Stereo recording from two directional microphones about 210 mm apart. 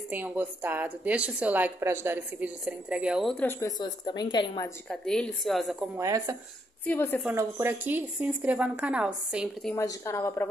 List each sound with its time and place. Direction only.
0.1 s a woman's voice: 10° right (ahead or behind); by 3.7 s 10° left (ahead or behind)
3.8 s a woman's voice: 20° left (ahead or behind)
4.8 s a woman's voice: 5° left (ahead or behind)
5.9 s a woman's voice: 15° right (ahead or behind)
6.9 s a woman's voice: 10° left (ahead or behind)
7.2 s a woman's voice: 10° right (ahead or behind)
9.8 s a woman's voice: 10° left (ahead or behind)